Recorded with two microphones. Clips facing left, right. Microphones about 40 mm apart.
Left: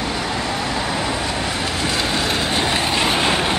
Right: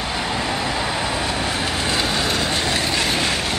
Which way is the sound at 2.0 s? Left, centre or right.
Centre.